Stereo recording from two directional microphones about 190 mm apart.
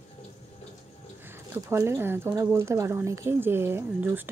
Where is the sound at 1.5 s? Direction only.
15° right (ahead or behind).